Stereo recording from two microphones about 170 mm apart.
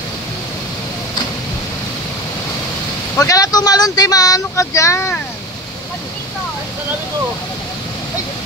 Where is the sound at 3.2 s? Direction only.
20° left (ahead or behind).